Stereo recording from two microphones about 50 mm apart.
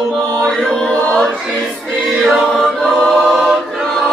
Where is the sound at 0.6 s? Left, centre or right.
Centre.